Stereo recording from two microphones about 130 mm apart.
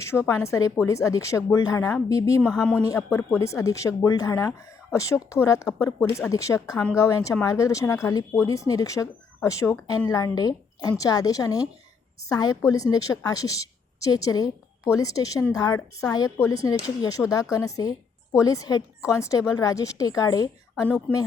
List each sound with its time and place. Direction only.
0.0 s speech: 20° left (ahead or behind)
21.1 s speech: 10° left (ahead or behind)